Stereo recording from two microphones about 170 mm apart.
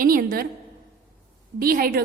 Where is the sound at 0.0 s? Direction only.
55° right (ahead or behind).